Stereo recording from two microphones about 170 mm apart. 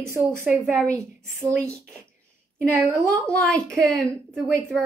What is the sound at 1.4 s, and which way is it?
Speech, 20° right (ahead or behind).